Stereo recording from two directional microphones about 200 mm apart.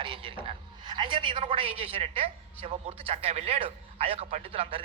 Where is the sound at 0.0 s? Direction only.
25° right (ahead or behind).